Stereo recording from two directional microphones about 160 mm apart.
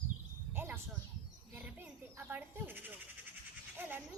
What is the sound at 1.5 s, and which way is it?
Goat, 10° right (ahead or behind).